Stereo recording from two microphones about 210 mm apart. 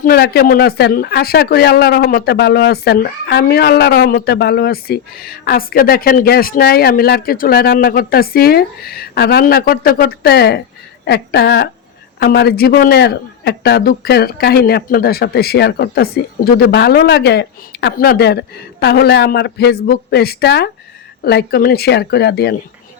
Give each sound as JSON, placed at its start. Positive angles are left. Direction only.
{"t": 0.0, "sound": "speech", "side_deg": 50}